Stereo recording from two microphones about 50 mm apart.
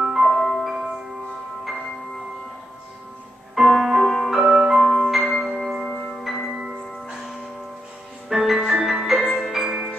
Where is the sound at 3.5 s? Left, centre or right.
Centre.